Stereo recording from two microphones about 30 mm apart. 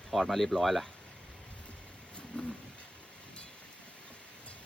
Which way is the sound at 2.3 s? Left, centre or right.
Left.